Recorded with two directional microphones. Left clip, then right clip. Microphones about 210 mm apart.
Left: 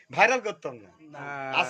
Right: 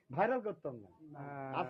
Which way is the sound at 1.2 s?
25° left (ahead or behind).